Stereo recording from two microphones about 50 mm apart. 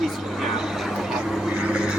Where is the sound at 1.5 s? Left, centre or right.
Centre.